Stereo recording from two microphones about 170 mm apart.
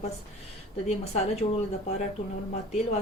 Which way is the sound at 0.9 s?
40° left (ahead or behind).